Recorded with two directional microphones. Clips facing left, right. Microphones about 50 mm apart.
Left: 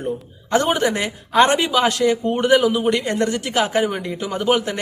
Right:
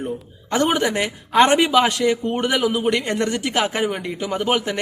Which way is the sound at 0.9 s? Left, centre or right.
Right.